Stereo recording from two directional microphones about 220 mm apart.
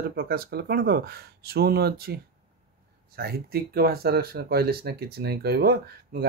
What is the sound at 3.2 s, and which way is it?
Speech, 45° right (ahead or behind).